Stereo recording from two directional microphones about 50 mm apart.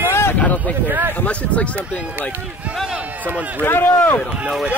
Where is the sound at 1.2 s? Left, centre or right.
Left.